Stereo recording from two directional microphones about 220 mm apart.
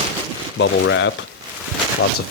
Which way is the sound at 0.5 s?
60° left (ahead or behind).